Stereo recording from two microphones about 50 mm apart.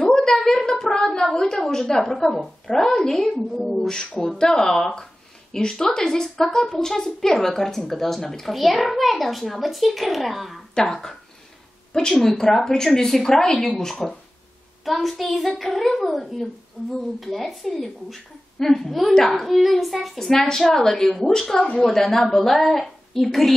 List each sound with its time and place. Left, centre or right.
0.0 s a sound: centre
3.6 s a child's voice: centre
10.7 s a child's voice: centre
17.2 s a child's voice: centre
19.1 s speech: centre
19.4 s a child's voice: centre